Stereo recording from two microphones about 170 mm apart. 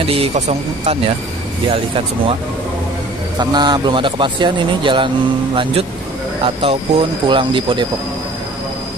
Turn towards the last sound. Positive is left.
turn(degrees=-30)  # may be behind; listen again after turning